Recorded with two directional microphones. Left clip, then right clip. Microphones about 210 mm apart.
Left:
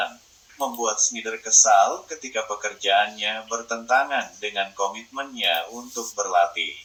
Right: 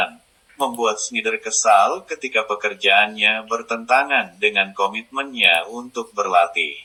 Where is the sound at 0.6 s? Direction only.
15° right (ahead or behind).